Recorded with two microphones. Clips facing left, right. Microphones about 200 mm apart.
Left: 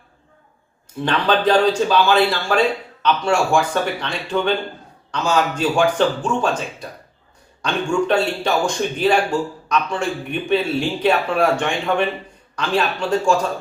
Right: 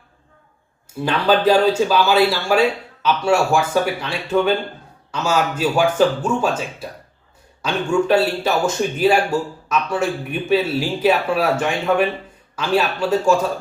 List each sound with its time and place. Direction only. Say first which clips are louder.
1.0 s speech: right 2 dB; 5° right (ahead or behind)